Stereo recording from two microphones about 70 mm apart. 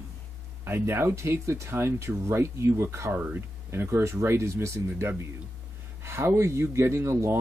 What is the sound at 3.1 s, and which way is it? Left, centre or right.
Speech, right.